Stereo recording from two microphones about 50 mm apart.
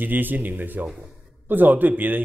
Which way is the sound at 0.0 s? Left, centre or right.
Right.